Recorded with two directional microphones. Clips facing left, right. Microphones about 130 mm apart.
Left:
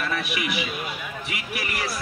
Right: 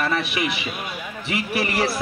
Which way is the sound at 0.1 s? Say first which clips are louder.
Right 3 dB; 30° right (ahead or behind).